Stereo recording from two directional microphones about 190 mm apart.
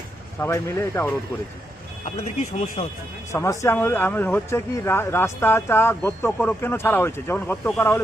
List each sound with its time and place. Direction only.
0.3 s speech: 15° left (ahead or behind)
2.0 s speech: 35° left (ahead or behind)
3.3 s speech: 15° left (ahead or behind)